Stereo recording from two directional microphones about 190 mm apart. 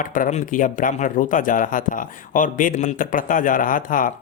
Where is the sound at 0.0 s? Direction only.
45° left (ahead or behind).